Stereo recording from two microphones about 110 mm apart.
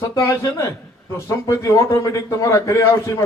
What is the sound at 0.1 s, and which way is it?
A man's voice, 30° left (ahead or behind).